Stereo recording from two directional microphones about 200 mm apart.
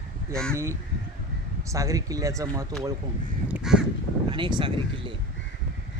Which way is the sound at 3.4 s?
5° right (ahead or behind).